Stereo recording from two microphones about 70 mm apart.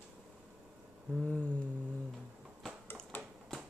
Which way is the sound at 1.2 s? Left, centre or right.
Centre.